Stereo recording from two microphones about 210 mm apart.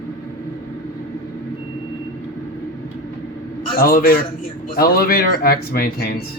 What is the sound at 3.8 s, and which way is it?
Speech, 45° left (ahead or behind).